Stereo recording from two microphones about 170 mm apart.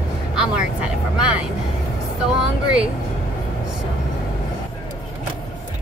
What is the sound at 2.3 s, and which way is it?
Speech, 5° right (ahead or behind).